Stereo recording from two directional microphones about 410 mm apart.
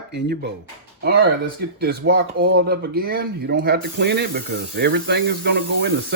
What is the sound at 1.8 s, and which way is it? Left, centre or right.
Speech, right.